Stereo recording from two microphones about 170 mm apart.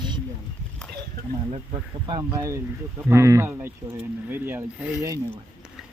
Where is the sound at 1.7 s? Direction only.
25° right (ahead or behind).